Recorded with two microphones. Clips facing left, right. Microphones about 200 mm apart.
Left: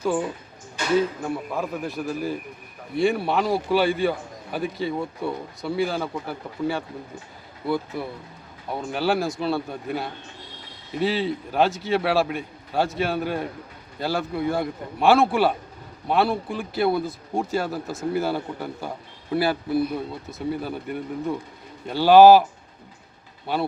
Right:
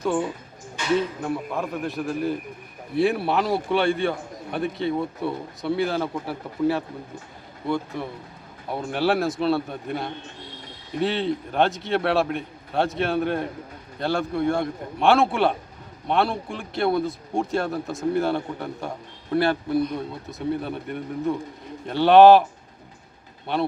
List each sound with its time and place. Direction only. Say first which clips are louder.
0.0 s a man's voice: even; centre (ahead or behind)
23.5 s a man's voice: right 1 dB; 5° left (ahead or behind)